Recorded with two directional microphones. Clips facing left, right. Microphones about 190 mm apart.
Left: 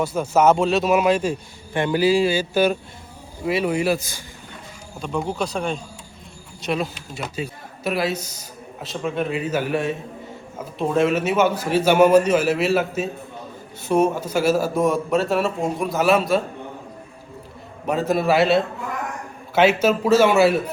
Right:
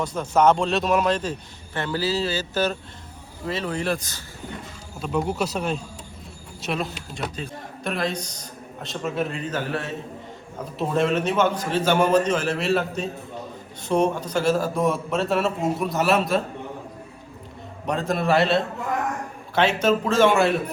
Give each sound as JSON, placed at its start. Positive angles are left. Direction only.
{"t": 0.0, "sound": "speech", "side_deg": 5}
{"t": 4.9, "sound": "a man's voice", "side_deg": -5}
{"t": 10.8, "sound": "a man's voice", "side_deg": 0}
{"t": 17.8, "sound": "a man's voice", "side_deg": 5}